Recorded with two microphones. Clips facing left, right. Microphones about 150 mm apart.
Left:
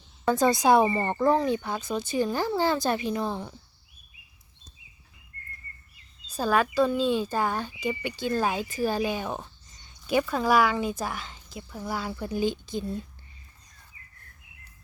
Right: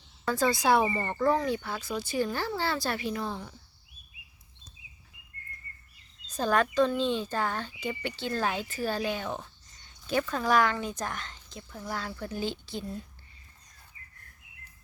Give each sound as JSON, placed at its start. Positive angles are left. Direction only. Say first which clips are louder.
{"t": 0.3, "sound": "speech", "louder": "left 4 dB", "side_deg": 20}
{"t": 6.2, "sound": "speech", "louder": "left 2 dB", "side_deg": 10}